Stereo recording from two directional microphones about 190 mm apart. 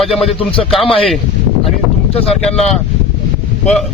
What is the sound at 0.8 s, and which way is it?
Speech, 30° left (ahead or behind).